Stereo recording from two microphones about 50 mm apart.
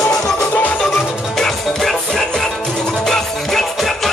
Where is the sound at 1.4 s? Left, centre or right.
Centre.